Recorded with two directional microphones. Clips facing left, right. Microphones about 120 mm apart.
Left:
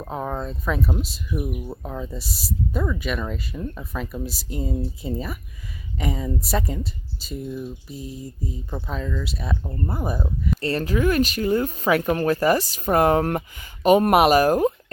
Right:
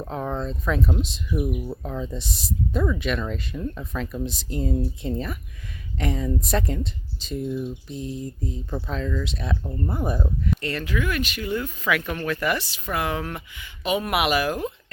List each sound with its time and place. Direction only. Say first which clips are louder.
0.0 s speech: even; 10° left (ahead or behind)
10.6 s speech: left 5 dB; 35° left (ahead or behind)